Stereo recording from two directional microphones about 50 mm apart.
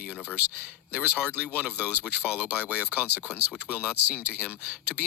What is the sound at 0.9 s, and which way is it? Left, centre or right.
Speech, right.